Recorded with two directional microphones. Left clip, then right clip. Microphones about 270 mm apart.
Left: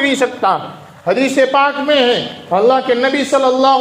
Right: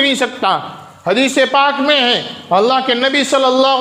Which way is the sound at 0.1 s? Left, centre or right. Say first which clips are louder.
Left 1 dB; right.